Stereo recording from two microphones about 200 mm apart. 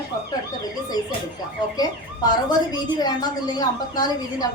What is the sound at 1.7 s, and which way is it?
A woman's voice, 20° left (ahead or behind).